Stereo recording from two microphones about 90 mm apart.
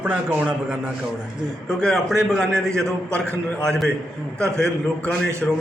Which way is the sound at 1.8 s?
5° left (ahead or behind).